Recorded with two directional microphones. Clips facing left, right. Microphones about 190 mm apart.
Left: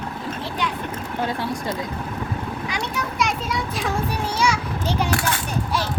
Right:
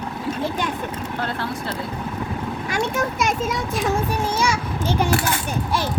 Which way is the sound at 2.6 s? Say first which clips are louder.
Right 8 dB; 45° right (ahead or behind).